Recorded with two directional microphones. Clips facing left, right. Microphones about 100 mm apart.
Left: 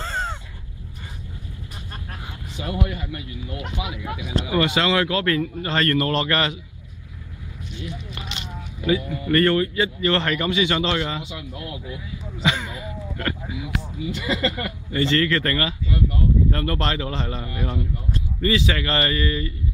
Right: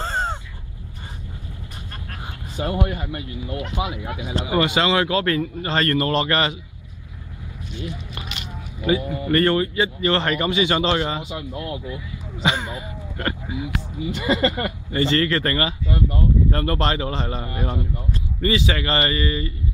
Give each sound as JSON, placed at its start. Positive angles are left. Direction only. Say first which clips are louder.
{"t": 0.0, "sound": "crow", "louder": "right 3 dB", "side_deg": -35}
{"t": 2.5, "sound": "speech", "louder": "right 3 dB", "side_deg": -45}
{"t": 4.6, "sound": "speech", "louder": "right 1 dB", "side_deg": -15}
{"t": 8.8, "sound": "speech", "louder": "right 1 dB", "side_deg": -20}
{"t": 17.4, "sound": "speech", "louder": "right 1 dB", "side_deg": -30}
{"t": 18.5, "sound": "speech", "louder": "right 1 dB", "side_deg": -15}